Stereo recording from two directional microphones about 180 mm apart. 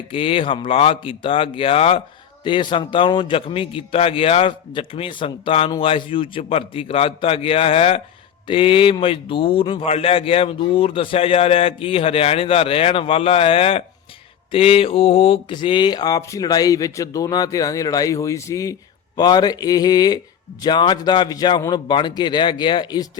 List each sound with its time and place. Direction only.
0.1 s a man's voice: 30° left (ahead or behind)